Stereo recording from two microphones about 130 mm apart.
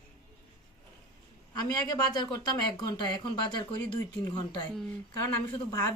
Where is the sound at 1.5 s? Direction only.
30° left (ahead or behind).